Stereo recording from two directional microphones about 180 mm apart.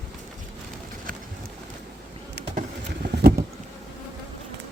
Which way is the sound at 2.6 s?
55° right (ahead or behind).